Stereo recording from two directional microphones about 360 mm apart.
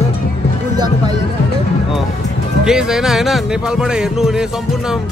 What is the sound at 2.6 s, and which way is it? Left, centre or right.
Speech, centre.